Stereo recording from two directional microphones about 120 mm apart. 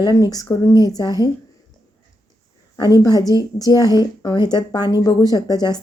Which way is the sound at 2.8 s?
30° left (ahead or behind).